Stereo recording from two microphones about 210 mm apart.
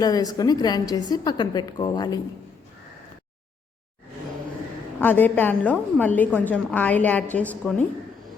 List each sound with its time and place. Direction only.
0.0 s a woman's voice: 15° left (ahead or behind)
4.9 s a woman's voice: 10° left (ahead or behind)